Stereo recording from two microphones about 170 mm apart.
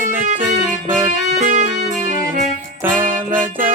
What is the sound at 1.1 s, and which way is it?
Music, 50° right (ahead or behind).